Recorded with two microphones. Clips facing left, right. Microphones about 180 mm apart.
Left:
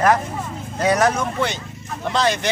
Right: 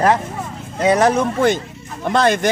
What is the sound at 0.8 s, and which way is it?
Speech, 30° right (ahead or behind).